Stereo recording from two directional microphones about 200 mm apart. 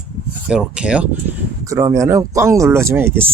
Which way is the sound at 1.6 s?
15° right (ahead or behind).